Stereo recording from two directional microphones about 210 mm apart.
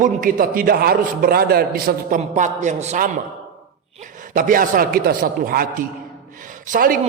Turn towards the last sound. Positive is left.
turn(degrees=-40)  # may be behind; listen again after turning